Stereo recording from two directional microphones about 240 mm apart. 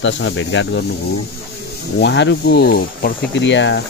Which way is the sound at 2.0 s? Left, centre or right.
Left.